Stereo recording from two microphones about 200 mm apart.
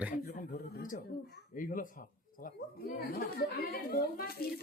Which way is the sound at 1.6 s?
40° left (ahead or behind).